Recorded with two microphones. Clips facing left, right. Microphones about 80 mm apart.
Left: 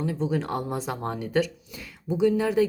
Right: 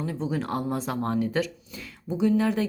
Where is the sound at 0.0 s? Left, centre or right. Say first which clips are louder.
Left 2 dB; centre.